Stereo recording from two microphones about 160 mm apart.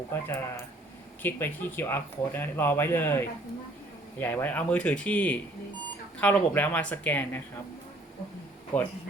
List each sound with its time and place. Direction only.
0.1 s speech: 15° left (ahead or behind)
8.7 s speech: 10° left (ahead or behind)